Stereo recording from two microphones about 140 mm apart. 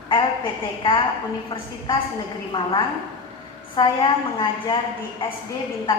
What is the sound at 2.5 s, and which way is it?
Speech, 35° left (ahead or behind).